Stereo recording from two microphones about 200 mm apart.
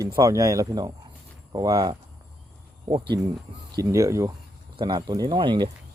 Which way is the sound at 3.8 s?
15° right (ahead or behind).